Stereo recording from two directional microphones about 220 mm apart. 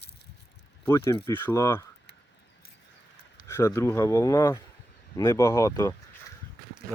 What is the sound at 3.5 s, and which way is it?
Speech, 10° left (ahead or behind).